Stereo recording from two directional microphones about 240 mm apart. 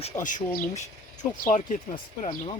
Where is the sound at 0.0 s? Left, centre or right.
Left.